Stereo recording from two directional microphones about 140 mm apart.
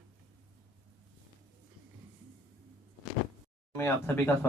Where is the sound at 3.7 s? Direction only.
15° left (ahead or behind).